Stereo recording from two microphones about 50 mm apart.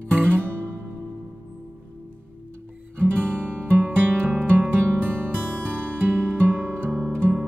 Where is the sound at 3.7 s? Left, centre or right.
Right.